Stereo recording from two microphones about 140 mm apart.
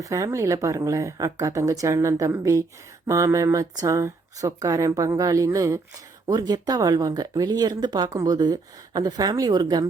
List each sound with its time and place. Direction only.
0.0 s speech: 25° right (ahead or behind)